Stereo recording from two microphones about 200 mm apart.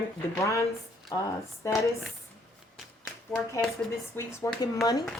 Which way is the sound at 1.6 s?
15° left (ahead or behind).